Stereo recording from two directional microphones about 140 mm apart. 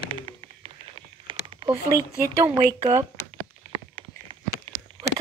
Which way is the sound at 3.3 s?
40° right (ahead or behind).